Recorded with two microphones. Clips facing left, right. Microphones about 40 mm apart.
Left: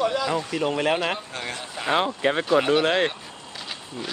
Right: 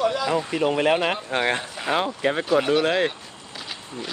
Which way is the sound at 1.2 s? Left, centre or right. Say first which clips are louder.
Right 9 dB; right.